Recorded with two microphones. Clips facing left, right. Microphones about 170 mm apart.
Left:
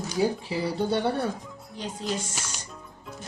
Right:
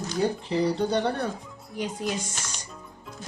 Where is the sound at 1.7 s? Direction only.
10° right (ahead or behind).